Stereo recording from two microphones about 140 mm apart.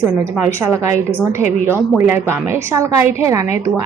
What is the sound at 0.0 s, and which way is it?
A woman's voice, 15° right (ahead or behind).